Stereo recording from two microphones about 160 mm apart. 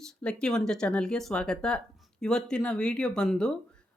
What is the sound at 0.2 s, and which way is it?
Speech, 5° left (ahead or behind).